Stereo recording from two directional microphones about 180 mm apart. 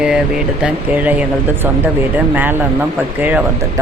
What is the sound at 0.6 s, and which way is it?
Speech, 10° right (ahead or behind).